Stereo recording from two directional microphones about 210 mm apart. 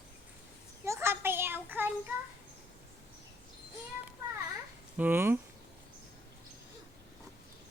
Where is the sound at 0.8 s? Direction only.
10° right (ahead or behind).